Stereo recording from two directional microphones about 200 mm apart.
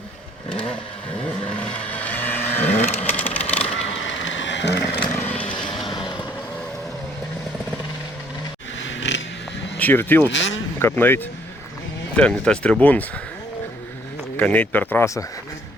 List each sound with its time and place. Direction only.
1.5 s vehicle: 5° left (ahead or behind)
3.2 s a sound: 10° left (ahead or behind)
3.9 s a sound: 70° left (ahead or behind)
5.0 s vehicle: 5° left (ahead or behind)
5.9 s vehicle: 25° left (ahead or behind)
8.8 s a sound: 65° left (ahead or behind)
9.7 s speech: 10° left (ahead or behind)
10.3 s speech: 70° left (ahead or behind)
10.8 s speech: 10° left (ahead or behind)
14.3 s speech: 10° left (ahead or behind)